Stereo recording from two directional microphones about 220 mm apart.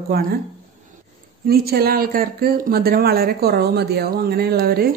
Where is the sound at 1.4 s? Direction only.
45° right (ahead or behind).